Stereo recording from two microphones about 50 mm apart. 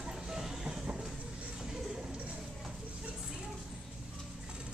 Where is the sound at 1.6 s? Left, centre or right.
Centre.